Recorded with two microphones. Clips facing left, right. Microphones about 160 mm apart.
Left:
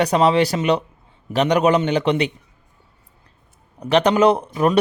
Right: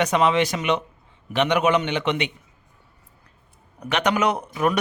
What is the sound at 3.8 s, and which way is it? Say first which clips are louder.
Speech: left 7 dB; 30° left (ahead or behind).